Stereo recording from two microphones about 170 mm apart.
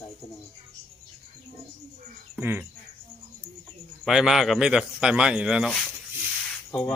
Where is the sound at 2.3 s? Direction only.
10° right (ahead or behind).